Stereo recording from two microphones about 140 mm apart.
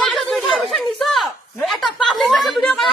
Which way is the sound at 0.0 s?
Centre (ahead or behind).